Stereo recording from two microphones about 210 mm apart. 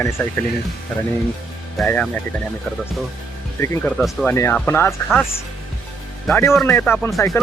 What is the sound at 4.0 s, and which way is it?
Speech, centre (ahead or behind).